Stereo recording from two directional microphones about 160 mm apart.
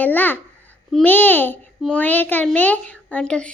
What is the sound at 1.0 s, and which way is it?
A child's voice, 10° left (ahead or behind).